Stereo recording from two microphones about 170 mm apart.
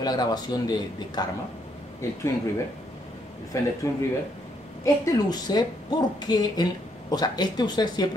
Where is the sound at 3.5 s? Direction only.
20° left (ahead or behind).